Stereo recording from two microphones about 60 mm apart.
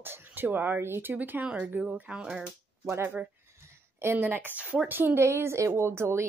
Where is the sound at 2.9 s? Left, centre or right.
Right.